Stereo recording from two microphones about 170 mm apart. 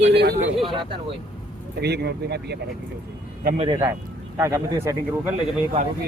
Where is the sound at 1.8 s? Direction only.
75° right (ahead or behind).